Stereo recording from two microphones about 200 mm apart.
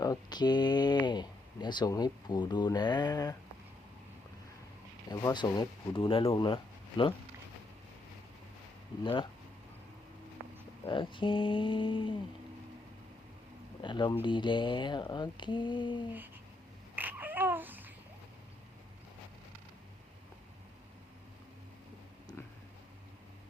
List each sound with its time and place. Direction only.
0.0 s speech: 20° left (ahead or behind)
5.0 s speech: 20° left (ahead or behind)
10.8 s speech: 25° left (ahead or behind)
13.8 s speech: 25° left (ahead or behind)
16.9 s babbling: 10° right (ahead or behind)